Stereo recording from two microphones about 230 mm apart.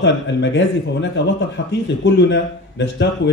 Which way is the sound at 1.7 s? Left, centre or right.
Left.